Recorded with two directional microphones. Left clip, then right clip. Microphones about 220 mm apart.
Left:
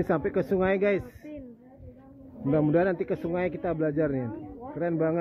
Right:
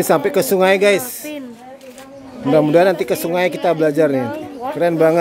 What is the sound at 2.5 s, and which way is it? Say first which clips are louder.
Speech: right 12 dB; 15° right (ahead or behind).